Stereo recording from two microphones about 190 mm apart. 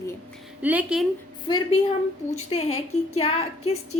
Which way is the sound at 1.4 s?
25° left (ahead or behind).